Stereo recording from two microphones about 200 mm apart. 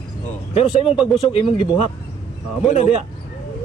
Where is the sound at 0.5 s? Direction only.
30° left (ahead or behind).